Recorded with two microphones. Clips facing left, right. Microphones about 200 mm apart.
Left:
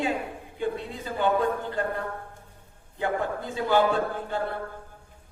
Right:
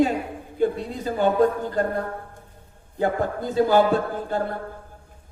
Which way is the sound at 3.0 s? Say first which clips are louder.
Right 5 dB; 40° right (ahead or behind).